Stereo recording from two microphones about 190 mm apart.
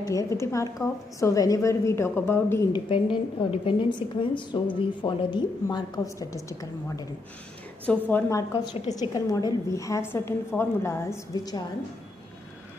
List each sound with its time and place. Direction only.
0.0 s a woman's voice: 15° left (ahead or behind)
2.9 s a woman's voice: 25° left (ahead or behind)